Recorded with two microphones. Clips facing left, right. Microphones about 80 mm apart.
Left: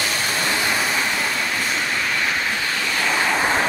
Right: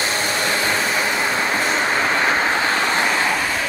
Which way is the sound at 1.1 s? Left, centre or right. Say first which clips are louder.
Right 4 dB; right.